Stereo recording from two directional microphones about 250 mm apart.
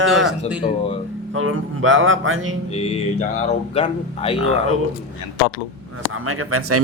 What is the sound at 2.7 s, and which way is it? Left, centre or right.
Speech, left.